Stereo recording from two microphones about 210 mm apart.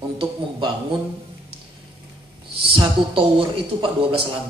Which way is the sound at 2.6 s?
25° right (ahead or behind).